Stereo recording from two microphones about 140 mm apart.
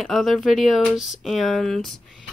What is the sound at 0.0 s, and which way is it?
Speech, centre (ahead or behind).